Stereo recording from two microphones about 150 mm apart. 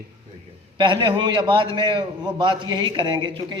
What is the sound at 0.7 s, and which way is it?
A man's voice, 30° right (ahead or behind).